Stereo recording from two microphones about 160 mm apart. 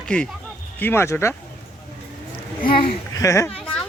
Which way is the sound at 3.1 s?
20° left (ahead or behind).